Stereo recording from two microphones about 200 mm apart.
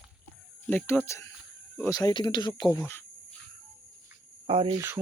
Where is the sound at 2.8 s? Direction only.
10° left (ahead or behind).